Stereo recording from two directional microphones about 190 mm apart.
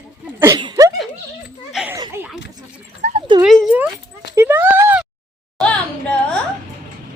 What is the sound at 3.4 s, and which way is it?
Speech, centre (ahead or behind).